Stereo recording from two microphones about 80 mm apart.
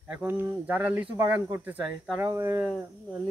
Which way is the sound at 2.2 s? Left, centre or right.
Right.